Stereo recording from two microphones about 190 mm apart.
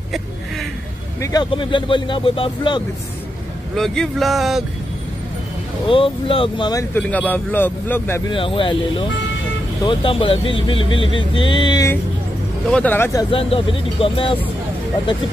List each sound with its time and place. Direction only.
1.2 s speech: 20° left (ahead or behind)
3.7 s speech: centre (ahead or behind)
5.9 s speech: 30° left (ahead or behind); by 8.2 s 10° left (ahead or behind)
8.3 s speech: 25° left (ahead or behind)
12.7 s speech: 10° left (ahead or behind)
13.3 s speech: 30° left (ahead or behind)